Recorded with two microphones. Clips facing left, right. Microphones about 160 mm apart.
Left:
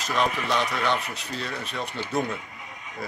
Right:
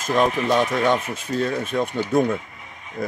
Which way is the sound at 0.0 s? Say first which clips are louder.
Right 6 dB; 45° right (ahead or behind).